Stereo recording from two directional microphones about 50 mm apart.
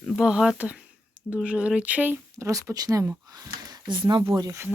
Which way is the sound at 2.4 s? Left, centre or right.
Right.